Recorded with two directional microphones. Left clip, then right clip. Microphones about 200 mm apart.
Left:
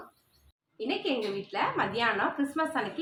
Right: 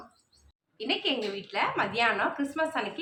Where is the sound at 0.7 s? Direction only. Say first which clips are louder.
Right 2 dB; 5° left (ahead or behind).